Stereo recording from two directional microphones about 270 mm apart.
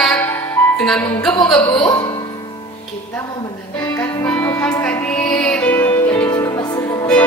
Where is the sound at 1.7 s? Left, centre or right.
Centre.